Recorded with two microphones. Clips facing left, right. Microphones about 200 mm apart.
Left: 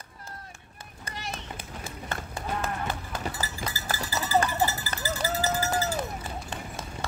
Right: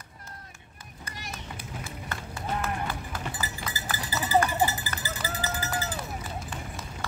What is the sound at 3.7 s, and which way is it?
Cowbell, 15° right (ahead or behind).